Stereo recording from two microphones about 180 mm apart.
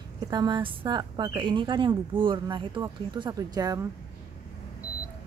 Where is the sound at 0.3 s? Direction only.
25° right (ahead or behind).